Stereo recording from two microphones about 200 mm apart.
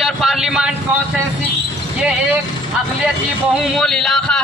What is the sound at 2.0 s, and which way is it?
A man's voice, 5° right (ahead or behind).